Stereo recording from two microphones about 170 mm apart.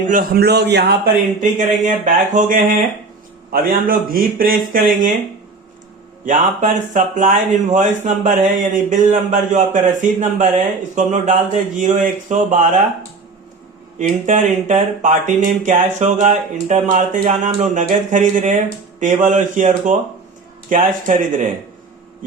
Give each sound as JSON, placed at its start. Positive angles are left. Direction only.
{"t": 0.0, "sound": "a man's voice", "side_deg": -55}
{"t": 1.4, "sound": "speech", "side_deg": -45}
{"t": 6.2, "sound": "speech", "side_deg": -50}
{"t": 14.0, "sound": "speech", "side_deg": -45}